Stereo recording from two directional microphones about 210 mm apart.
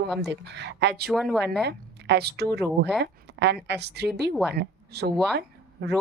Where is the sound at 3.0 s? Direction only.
55° right (ahead or behind).